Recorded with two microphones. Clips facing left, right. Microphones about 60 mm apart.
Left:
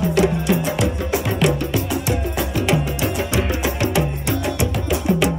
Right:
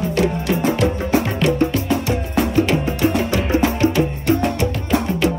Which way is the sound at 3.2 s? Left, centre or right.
Centre.